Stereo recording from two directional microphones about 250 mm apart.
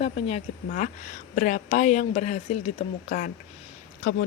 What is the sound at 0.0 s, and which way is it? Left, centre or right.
A woman's voice, left.